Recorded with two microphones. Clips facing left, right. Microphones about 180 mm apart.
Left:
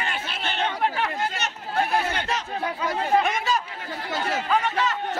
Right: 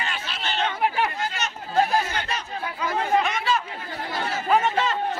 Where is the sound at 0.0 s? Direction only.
55° left (ahead or behind).